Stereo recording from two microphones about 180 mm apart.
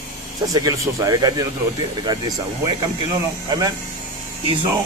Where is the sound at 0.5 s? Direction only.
20° right (ahead or behind).